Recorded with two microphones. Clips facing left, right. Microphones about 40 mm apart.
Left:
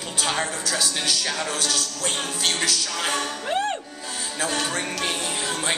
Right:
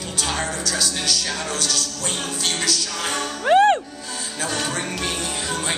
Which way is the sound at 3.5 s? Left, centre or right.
Right.